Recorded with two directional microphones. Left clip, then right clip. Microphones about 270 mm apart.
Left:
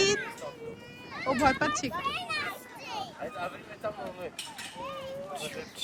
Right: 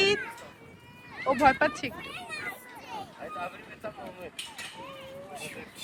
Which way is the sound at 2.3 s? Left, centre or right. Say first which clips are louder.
Left 4 dB; centre.